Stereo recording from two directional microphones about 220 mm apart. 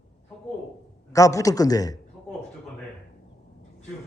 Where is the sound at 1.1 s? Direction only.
15° left (ahead or behind).